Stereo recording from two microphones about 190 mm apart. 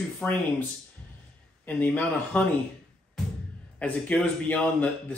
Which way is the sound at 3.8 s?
5° left (ahead or behind).